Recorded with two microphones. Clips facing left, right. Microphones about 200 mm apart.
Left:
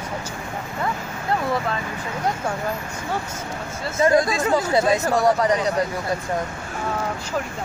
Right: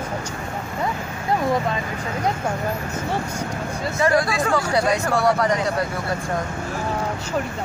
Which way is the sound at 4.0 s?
20° left (ahead or behind).